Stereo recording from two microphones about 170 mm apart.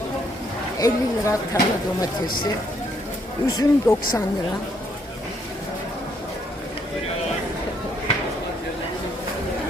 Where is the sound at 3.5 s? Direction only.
20° left (ahead or behind).